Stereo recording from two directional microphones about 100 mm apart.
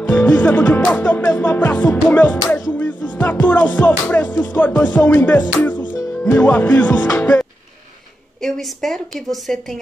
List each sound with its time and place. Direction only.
0.0 s music: 20° left (ahead or behind)
8.4 s a woman's voice: 5° left (ahead or behind)